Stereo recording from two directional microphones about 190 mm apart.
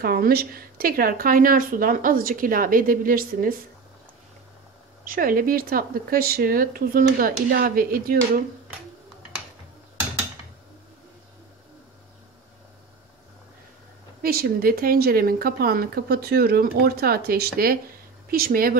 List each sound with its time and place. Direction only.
0.0 s speech: 50° right (ahead or behind)
5.0 s speech: 50° right (ahead or behind)
14.2 s speech: 50° right (ahead or behind)